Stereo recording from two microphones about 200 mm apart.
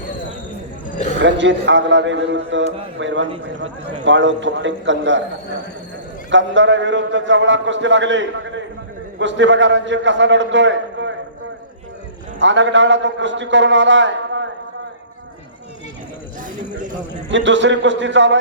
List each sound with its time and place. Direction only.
0.9 s a sound: 40° left (ahead or behind)
1.2 s a man's voice: 65° right (ahead or behind)
6.3 s a man's voice: 65° right (ahead or behind)
12.4 s a man's voice: 65° right (ahead or behind)
17.2 s a man's voice: 65° right (ahead or behind)